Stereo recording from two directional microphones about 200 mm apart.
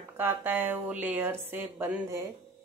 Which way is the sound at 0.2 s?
10° right (ahead or behind).